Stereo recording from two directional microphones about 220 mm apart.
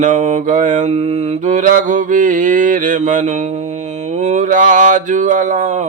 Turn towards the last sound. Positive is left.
turn(degrees=-35)  # may be behind; listen again after turning